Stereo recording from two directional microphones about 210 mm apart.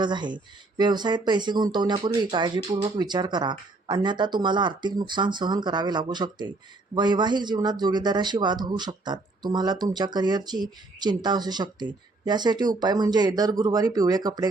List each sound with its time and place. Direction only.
0.0 s a man's voice: 20° right (ahead or behind)